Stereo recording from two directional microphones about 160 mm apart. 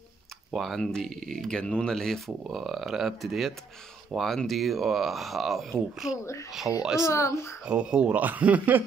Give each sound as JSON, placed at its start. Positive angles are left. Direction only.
{"t": 0.5, "sound": "speech", "side_deg": 0}
{"t": 7.1, "sound": "speech", "side_deg": 15}
{"t": 7.6, "sound": "speech", "side_deg": -5}